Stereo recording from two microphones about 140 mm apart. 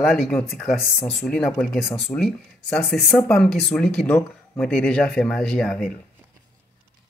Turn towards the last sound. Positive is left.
turn(degrees=5)  # may be behind; listen again after turning